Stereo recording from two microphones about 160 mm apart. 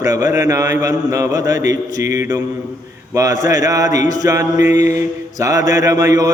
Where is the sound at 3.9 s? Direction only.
50° left (ahead or behind).